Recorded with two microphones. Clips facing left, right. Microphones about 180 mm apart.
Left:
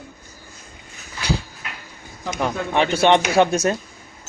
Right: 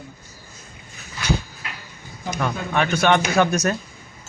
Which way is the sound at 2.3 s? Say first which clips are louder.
Left 2 dB; 20° left (ahead or behind).